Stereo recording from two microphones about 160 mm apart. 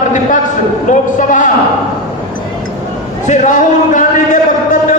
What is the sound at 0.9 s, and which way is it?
Speech, 55° left (ahead or behind).